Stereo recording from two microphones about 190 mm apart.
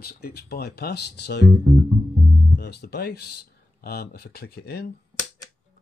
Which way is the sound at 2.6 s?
60° left (ahead or behind).